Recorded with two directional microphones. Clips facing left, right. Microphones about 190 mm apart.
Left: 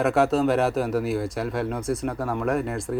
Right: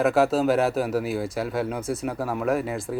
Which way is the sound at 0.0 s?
Centre (ahead or behind).